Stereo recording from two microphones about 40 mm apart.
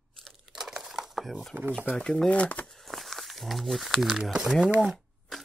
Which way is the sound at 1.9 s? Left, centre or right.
Centre.